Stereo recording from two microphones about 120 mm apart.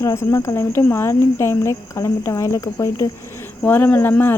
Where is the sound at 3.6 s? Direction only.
15° left (ahead or behind).